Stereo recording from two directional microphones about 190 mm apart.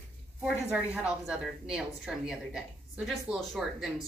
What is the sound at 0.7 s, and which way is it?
A woman's voice, 5° right (ahead or behind).